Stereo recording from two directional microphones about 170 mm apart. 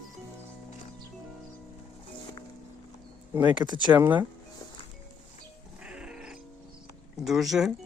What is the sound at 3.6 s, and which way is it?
Speech, 25° right (ahead or behind).